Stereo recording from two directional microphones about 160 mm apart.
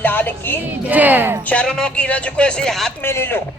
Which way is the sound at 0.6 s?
10° right (ahead or behind).